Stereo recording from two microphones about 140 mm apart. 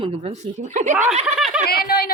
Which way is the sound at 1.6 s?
90° left.